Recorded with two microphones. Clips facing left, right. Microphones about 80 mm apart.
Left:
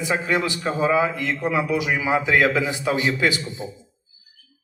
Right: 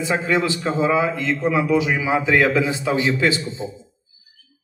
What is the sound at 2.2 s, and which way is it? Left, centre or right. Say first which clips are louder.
Speech: right 2 dB; right.